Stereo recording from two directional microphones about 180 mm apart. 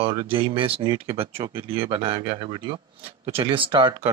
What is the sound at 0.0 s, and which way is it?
Speech, 30° right (ahead or behind).